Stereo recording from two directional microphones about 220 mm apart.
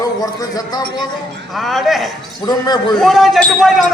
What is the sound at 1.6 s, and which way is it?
Speech, centre (ahead or behind).